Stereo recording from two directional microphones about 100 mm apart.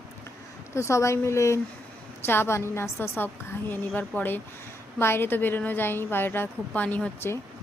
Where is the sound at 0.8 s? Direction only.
30° left (ahead or behind).